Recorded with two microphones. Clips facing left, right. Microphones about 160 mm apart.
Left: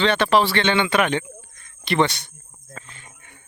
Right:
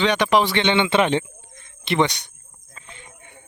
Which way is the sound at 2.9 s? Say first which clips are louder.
Right 3 dB; 20° right (ahead or behind).